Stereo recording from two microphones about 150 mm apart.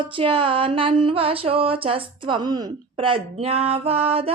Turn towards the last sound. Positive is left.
turn(degrees=-40)  # may be behind; listen again after turning